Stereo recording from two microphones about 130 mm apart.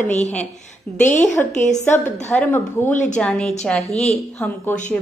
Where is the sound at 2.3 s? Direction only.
10° left (ahead or behind).